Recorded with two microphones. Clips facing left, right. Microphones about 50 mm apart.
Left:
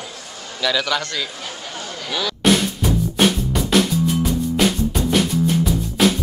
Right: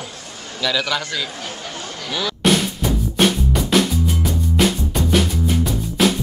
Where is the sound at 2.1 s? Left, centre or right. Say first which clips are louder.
Even; centre.